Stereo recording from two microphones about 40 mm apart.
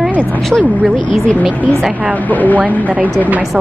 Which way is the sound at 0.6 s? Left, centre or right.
Right.